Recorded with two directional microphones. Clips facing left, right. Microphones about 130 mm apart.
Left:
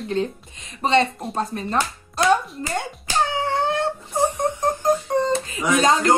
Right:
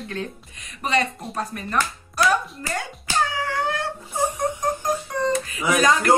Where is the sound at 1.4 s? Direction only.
25° left (ahead or behind).